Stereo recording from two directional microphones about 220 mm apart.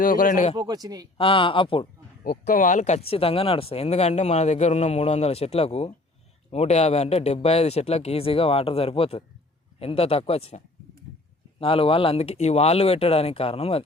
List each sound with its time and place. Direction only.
0.0 s speech: 40° left (ahead or behind)
0.5 s speech: 20° right (ahead or behind)
1.2 s a man's voice: 25° left (ahead or behind)
2.2 s a man's voice: 35° left (ahead or behind)
11.6 s a man's voice: 25° left (ahead or behind)